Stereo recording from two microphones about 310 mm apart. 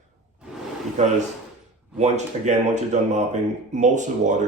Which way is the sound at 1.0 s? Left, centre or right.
Right.